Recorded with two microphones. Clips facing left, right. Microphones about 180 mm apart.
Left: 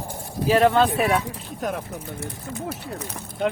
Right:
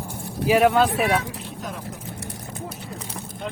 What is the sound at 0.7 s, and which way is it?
Speech, centre (ahead or behind).